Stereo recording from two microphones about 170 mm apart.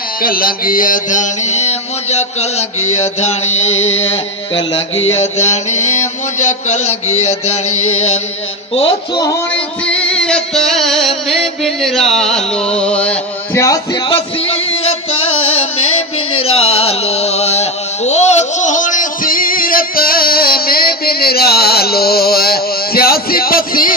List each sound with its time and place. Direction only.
0.2 s mantra: 60° left (ahead or behind); by 4.0 s 40° left (ahead or behind)
5.0 s mantra: 40° left (ahead or behind)
9.1 s music: 20° left (ahead or behind)
9.8 s music: 5° left (ahead or behind)
14.1 s a sound: 35° left (ahead or behind)
16.4 s a sound: 35° left (ahead or behind); by 23.9 s 60° left (ahead or behind)